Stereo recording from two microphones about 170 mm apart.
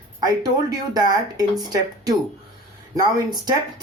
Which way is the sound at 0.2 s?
25° right (ahead or behind).